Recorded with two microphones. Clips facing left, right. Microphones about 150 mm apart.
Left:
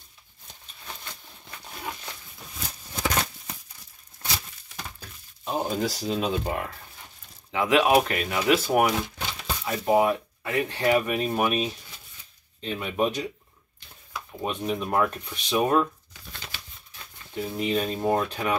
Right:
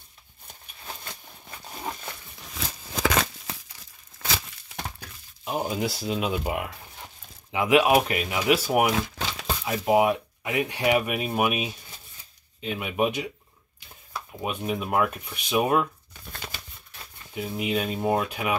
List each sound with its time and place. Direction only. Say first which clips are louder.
2.5 s crumpling: right 4 dB; 90° right
4.2 s a sound: right 3 dB; 90° right
5.4 s speech: left 1 dB; 10° right (ahead or behind)
14.4 s speech: left 1 dB; 10° right (ahead or behind)
16.1 s shuffling cards: right 3 dB; 50° right (ahead or behind)
17.3 s speech: left 1 dB; 10° right (ahead or behind)